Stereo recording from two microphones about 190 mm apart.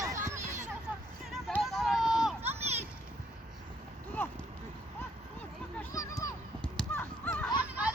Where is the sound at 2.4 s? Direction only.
35° right (ahead or behind).